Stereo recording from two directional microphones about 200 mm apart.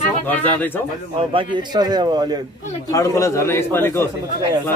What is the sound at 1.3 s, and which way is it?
A man's voice, 25° right (ahead or behind).